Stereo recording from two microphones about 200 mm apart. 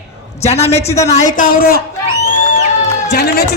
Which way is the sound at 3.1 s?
55° left (ahead or behind).